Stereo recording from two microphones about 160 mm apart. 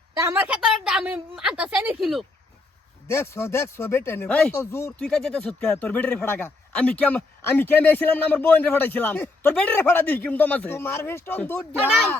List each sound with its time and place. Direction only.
0.2 s a woman's voice: 15° right (ahead or behind)
3.1 s speech: 15° left (ahead or behind)
4.9 s speech: 5° left (ahead or behind)